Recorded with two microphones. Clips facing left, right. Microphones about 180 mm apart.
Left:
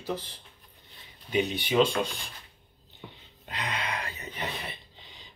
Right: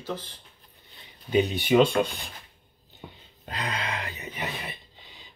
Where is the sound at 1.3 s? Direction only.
40° right (ahead or behind).